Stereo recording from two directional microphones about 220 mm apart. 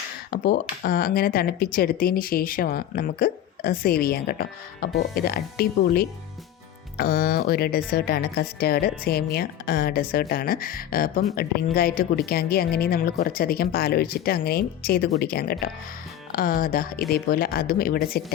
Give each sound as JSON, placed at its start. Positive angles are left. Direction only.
{"t": 0.3, "sound": "speech", "side_deg": 45}